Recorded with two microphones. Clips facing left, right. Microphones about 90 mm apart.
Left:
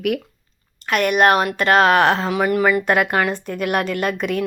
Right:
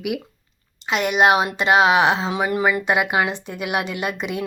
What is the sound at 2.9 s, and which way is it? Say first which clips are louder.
Speech: left 2 dB; 10° right (ahead or behind).